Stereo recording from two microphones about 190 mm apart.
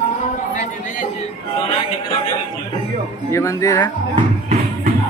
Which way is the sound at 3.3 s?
20° left (ahead or behind).